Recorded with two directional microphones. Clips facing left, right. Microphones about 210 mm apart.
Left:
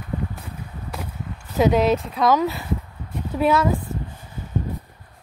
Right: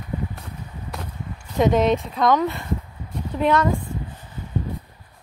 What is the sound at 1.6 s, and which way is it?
Speech, centre (ahead or behind).